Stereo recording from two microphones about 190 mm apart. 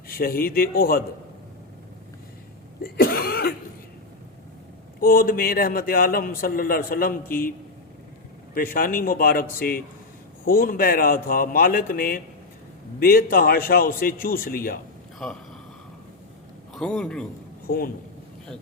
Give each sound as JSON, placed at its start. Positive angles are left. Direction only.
{"t": 0.1, "sound": "a man's voice", "side_deg": 50}
{"t": 2.8, "sound": "a man's voice", "side_deg": 50}
{"t": 4.9, "sound": "a man's voice", "side_deg": 50}
{"t": 8.5, "sound": "a man's voice", "side_deg": 50}
{"t": 15.2, "sound": "a man's voice", "side_deg": 0}
{"t": 16.7, "sound": "a man's voice", "side_deg": 5}
{"t": 17.7, "sound": "a man's voice", "side_deg": 50}